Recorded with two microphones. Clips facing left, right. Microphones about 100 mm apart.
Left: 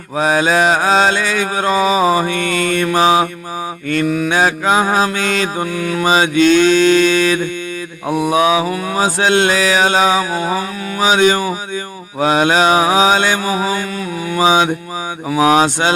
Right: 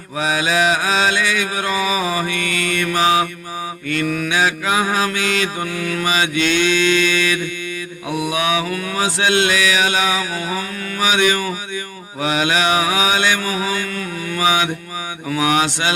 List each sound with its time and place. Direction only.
0.2 s mantra: 40° left (ahead or behind); by 9.0 s 25° left (ahead or behind)
9.0 s mantra: 40° left (ahead or behind)